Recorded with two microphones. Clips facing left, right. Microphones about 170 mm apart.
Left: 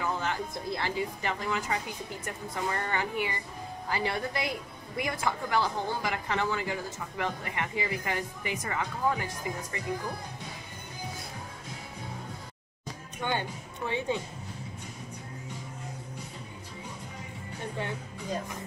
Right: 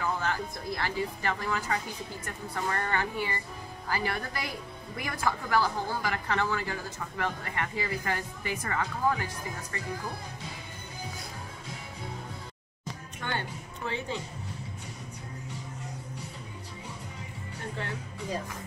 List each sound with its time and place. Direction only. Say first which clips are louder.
0.0 s a woman's voice: even; 20° left (ahead or behind)
13.2 s a woman's voice: left 3 dB; 15° left (ahead or behind)